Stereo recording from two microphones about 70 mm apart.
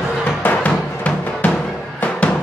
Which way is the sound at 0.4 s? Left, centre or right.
Left.